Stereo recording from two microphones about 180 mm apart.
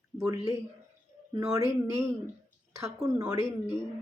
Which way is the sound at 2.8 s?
15° right (ahead or behind).